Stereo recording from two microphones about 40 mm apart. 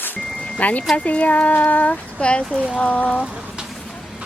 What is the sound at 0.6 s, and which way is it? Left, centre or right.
Speech, left.